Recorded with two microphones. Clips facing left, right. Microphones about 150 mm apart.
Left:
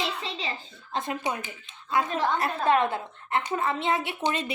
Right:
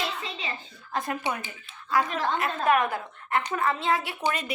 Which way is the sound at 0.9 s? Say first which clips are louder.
Even; 20° left (ahead or behind).